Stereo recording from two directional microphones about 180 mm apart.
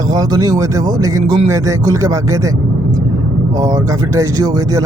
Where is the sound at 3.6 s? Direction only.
20° right (ahead or behind).